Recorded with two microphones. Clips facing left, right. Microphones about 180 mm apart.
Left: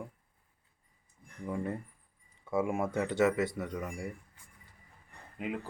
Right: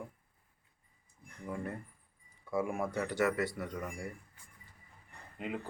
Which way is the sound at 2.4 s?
25° left (ahead or behind).